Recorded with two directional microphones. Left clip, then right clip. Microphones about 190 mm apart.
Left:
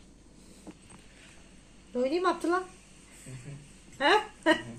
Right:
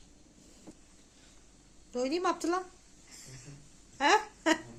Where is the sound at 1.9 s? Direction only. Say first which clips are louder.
Left 3 dB; 25° right (ahead or behind).